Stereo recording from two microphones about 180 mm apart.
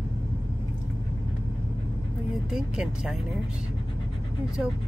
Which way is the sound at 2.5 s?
5° right (ahead or behind).